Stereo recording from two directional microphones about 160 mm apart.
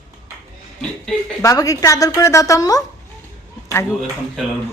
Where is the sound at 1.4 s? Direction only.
20° left (ahead or behind).